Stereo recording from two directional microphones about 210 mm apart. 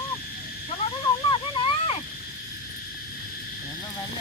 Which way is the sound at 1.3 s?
25° left (ahead or behind).